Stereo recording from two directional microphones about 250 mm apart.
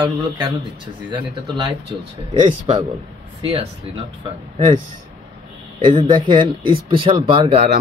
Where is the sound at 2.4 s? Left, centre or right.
Centre.